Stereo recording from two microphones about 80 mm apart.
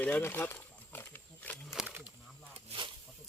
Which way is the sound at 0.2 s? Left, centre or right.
Left.